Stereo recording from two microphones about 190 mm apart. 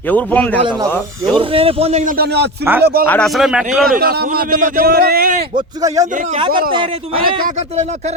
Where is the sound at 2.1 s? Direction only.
60° right (ahead or behind).